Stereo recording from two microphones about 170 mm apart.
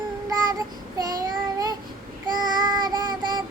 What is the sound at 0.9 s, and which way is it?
Child singing, 20° right (ahead or behind).